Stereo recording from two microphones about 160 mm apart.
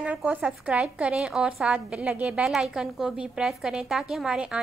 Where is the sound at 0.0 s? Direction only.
10° right (ahead or behind).